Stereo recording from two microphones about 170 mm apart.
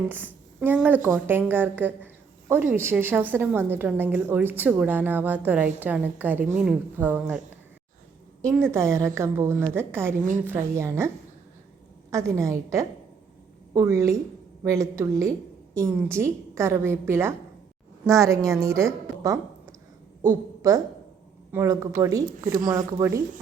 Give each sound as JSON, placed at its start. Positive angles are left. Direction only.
{"t": 0.6, "sound": "a woman's voice", "side_deg": -10}
{"t": 8.4, "sound": "a woman's voice", "side_deg": -15}
{"t": 12.1, "sound": "a woman's voice", "side_deg": -15}